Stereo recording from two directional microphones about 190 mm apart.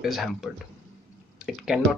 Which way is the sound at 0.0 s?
Centre (ahead or behind).